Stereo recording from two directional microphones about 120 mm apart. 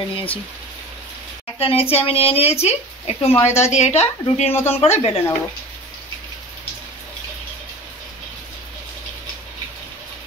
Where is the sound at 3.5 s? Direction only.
70° left (ahead or behind).